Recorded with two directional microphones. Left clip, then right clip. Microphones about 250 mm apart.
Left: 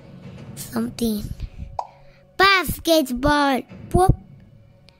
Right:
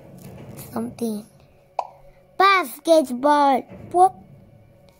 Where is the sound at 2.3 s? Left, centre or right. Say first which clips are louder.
Even; left.